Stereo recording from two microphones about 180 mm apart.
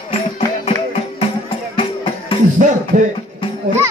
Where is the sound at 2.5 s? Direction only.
45° right (ahead or behind).